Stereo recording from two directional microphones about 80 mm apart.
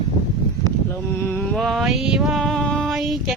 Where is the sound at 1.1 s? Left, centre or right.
Left.